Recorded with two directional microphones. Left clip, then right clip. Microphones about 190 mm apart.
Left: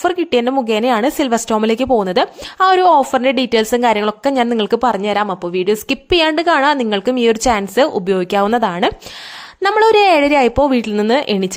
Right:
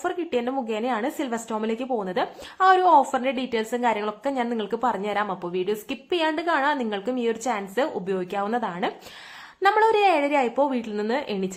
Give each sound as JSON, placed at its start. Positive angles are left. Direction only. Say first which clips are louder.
{"t": 0.0, "sound": "a woman's voice", "louder": "left 11 dB", "side_deg": 50}